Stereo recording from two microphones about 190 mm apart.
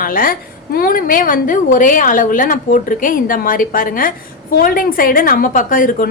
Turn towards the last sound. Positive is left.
turn(degrees=45)  # may be behind; listen again after turning